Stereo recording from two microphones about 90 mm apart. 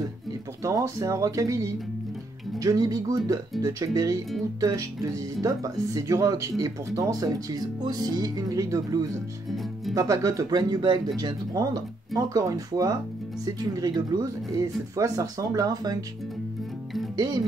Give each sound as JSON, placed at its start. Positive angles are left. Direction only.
{"t": 0.7, "sound": "speech", "side_deg": -35}